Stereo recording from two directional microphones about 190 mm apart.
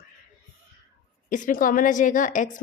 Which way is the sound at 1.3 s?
45° left (ahead or behind).